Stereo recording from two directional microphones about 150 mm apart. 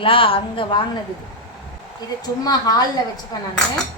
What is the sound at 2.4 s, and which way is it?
Speech, 25° left (ahead or behind).